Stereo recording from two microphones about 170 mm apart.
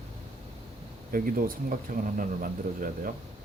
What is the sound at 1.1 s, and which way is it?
Speech, 55° right (ahead or behind).